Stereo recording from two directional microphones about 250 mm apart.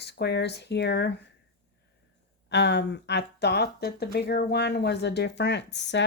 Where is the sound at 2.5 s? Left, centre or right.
Left.